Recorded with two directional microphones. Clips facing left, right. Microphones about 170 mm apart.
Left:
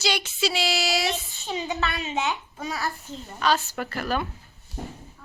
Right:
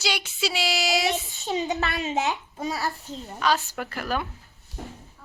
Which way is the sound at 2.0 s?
45° right (ahead or behind).